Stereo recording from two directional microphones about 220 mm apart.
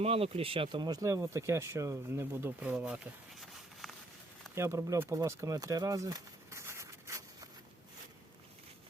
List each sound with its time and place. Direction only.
0.0 s speech: 25° right (ahead or behind); by 3.0 s 5° right (ahead or behind)
3.4 s a sound: centre (ahead or behind)
4.5 s speech: 10° right (ahead or behind)